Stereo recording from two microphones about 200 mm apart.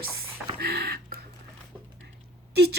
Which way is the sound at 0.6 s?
50° right (ahead or behind).